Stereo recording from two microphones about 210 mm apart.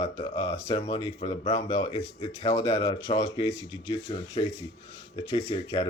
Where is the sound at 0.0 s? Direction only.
20° left (ahead or behind).